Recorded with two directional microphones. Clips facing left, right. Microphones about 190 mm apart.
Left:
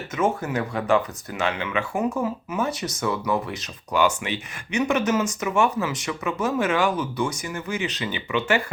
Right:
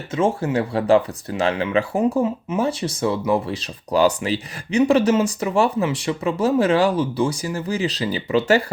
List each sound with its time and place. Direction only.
0.1 s speech: 30° right (ahead or behind)